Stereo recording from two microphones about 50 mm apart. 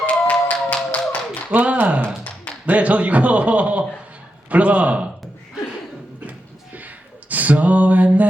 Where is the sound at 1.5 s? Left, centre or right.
Right.